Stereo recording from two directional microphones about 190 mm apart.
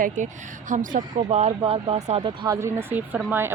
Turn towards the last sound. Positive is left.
turn(degrees=-10)  # may be behind; listen again after turning